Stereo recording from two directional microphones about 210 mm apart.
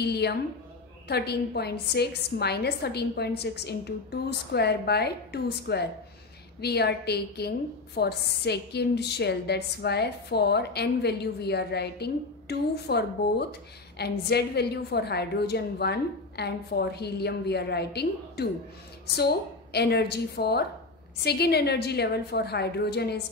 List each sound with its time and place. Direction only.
0.0 s a woman's voice: 50° left (ahead or behind)